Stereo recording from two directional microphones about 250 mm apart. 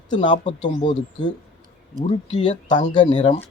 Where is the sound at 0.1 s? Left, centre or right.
Centre.